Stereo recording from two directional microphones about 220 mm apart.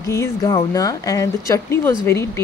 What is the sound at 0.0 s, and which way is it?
Speech, 15° left (ahead or behind).